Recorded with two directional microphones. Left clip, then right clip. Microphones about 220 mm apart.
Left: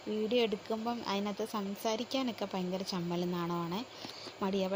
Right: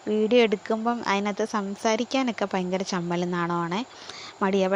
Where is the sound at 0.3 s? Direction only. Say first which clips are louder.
Right 11 dB; 25° right (ahead or behind).